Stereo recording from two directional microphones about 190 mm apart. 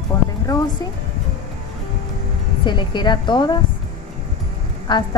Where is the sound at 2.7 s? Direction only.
25° left (ahead or behind).